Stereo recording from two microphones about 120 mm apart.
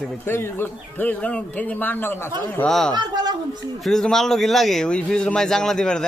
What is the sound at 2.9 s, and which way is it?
Speech, 35° right (ahead or behind).